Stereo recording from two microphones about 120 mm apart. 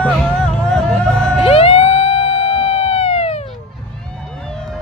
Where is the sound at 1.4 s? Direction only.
55° left (ahead or behind).